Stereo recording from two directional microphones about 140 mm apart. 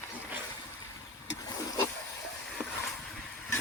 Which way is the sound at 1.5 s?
25° left (ahead or behind).